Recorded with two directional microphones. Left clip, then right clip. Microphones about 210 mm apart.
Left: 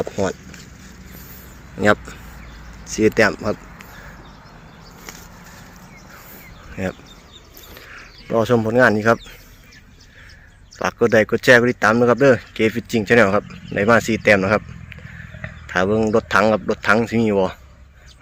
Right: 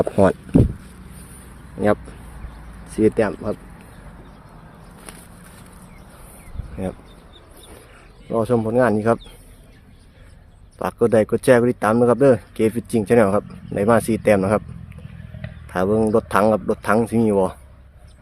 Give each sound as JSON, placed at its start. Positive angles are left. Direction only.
{"t": 0.0, "sound": "speech", "side_deg": -40}
{"t": 1.8, "sound": "speech", "side_deg": -5}
{"t": 2.8, "sound": "speech", "side_deg": -15}
{"t": 3.2, "sound": "speech", "side_deg": 0}
{"t": 6.8, "sound": "speech", "side_deg": -5}
{"t": 8.3, "sound": "speech", "side_deg": 0}
{"t": 11.0, "sound": "speech", "side_deg": -10}